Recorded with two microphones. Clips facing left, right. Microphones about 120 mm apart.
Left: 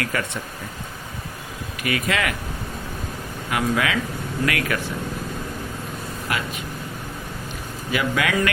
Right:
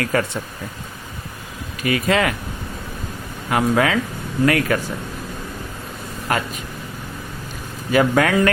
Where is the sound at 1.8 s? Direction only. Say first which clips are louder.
Right 5 dB; 30° right (ahead or behind).